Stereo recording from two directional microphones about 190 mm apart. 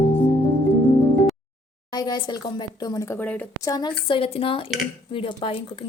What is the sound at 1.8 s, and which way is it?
Speech, 20° left (ahead or behind).